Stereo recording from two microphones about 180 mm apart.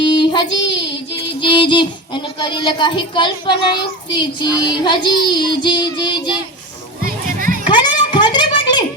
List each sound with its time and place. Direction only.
0.0 s child singing: 25° left (ahead or behind)
1.1 s music: 25° left (ahead or behind)
2.4 s a child's voice: 25° left (ahead or behind)
7.0 s music: 50° right (ahead or behind)
7.7 s a sound: 25° left (ahead or behind)